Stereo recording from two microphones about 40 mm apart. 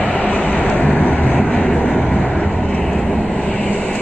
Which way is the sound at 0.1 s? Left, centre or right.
Left.